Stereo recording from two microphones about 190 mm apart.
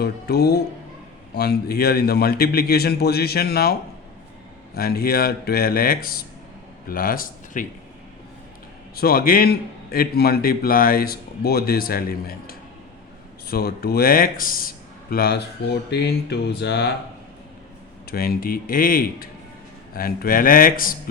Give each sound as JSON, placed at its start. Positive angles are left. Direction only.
{"t": 0.0, "sound": "a man's voice", "side_deg": 55}
{"t": 9.0, "sound": "a man's voice", "side_deg": 50}
{"t": 18.1, "sound": "a man's voice", "side_deg": 50}